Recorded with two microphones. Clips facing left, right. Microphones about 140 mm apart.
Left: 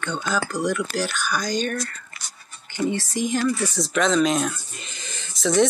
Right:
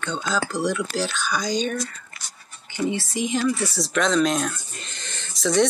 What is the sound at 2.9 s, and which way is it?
Speech, 5° right (ahead or behind).